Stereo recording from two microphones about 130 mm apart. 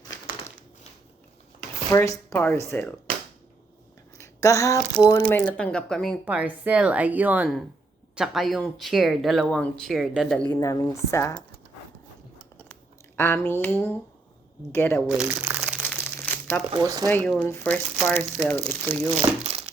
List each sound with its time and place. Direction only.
1.9 s speech: 20° left (ahead or behind)
4.2 s a sound: 25° left (ahead or behind)
5.0 s speech: 15° left (ahead or behind)
6.2 s a woman's voice: 10° right (ahead or behind)
10.5 s speech: 25° left (ahead or behind)
13.1 s speech: 20° left (ahead or behind)
15.0 s crumpling: 5° right (ahead or behind)
15.8 s crumpling: 15° left (ahead or behind)
16.7 s speech: 30° right (ahead or behind)
17.2 s speech: 10° left (ahead or behind)
19.4 s crumpling: 50° right (ahead or behind)